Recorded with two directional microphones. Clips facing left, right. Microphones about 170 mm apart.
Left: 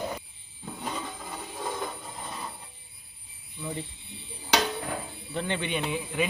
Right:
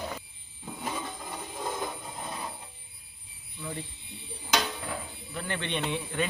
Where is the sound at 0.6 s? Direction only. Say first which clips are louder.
Even; 5° right (ahead or behind).